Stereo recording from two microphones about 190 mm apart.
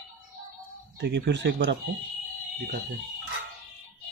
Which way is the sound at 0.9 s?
65° right (ahead or behind).